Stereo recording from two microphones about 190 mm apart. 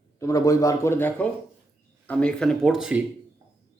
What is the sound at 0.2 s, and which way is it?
Speech, 15° left (ahead or behind).